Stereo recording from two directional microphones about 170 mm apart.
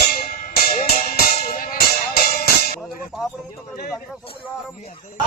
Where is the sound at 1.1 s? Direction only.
60° left (ahead or behind).